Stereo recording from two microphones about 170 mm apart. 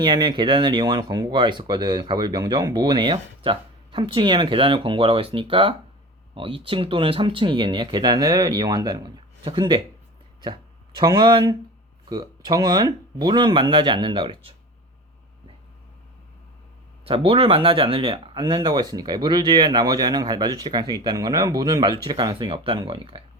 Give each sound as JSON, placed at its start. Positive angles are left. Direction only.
{"t": 0.0, "sound": "speech", "side_deg": -25}
{"t": 17.1, "sound": "speech", "side_deg": -35}